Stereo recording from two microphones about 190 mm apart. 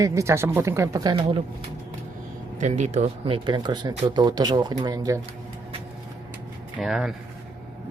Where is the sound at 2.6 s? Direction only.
35° right (ahead or behind); by 5.2 s 20° right (ahead or behind).